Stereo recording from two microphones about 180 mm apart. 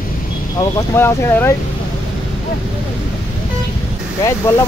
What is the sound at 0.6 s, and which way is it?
Speech, 15° left (ahead or behind).